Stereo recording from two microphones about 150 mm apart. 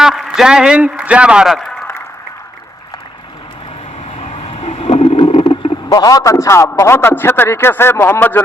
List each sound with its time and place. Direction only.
0.0 s a man's voice: 5° right (ahead or behind)
4.2 s a sound: 40° left (ahead or behind)
5.9 s a man's voice: 25° left (ahead or behind)